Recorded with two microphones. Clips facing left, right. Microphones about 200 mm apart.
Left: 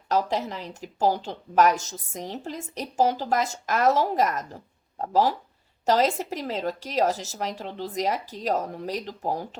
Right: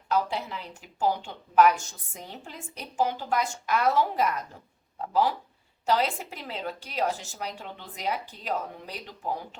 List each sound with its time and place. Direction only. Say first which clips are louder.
0.1 s a woman's voice: left 3 dB; 40° left (ahead or behind)